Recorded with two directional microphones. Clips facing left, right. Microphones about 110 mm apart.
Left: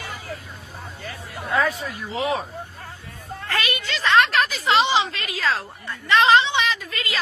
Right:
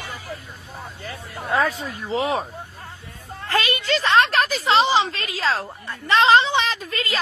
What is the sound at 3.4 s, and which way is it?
A woman's voice, 30° right (ahead or behind).